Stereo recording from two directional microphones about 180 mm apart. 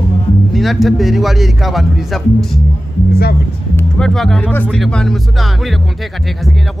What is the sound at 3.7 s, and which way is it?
Speech, 5° left (ahead or behind).